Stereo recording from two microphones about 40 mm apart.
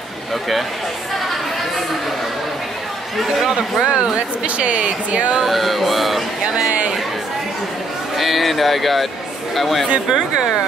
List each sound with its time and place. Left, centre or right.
3.8 s speech: right
4.6 s speech: right
5.4 s speech: centre
8.2 s speech: centre
10.0 s speech: centre